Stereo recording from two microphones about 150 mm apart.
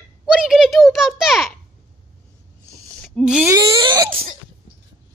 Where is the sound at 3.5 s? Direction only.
25° right (ahead or behind).